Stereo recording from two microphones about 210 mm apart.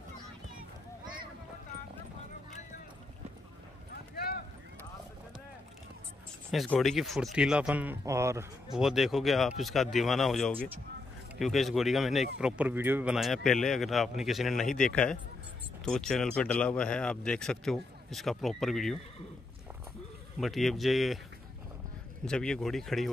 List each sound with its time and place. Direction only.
3.9 s clip-clop: 45° left (ahead or behind)
6.5 s speech: centre (ahead or behind)
8.7 s speech: centre (ahead or behind)
20.3 s speech: centre (ahead or behind)
22.2 s speech: 5° left (ahead or behind)